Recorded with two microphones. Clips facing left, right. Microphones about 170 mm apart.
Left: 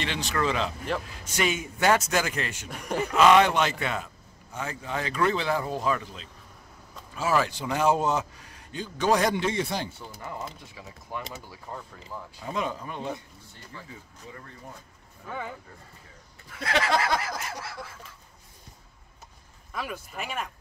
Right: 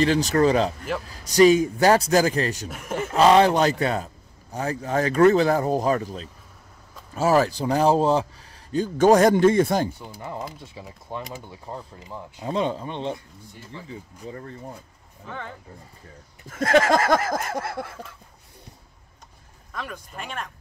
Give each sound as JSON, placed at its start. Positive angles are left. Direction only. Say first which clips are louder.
{"t": 0.0, "sound": "a man's voice", "louder": "right 10 dB", "side_deg": -40}
{"t": 2.7, "sound": "speech", "louder": "right 1 dB", "side_deg": 0}
{"t": 3.2, "sound": "a man's voice", "louder": "right 3 dB", "side_deg": -35}
{"t": 8.7, "sound": "a sound", "louder": "right 8 dB", "side_deg": -45}
{"t": 10.1, "sound": "a man's voice", "louder": "right 4 dB", "side_deg": -30}
{"t": 15.2, "sound": "speech", "louder": "even", "side_deg": 10}
{"t": 16.4, "sound": "a sound", "louder": "right 9 dB", "side_deg": -45}
{"t": 19.7, "sound": "speech", "louder": "even", "side_deg": 5}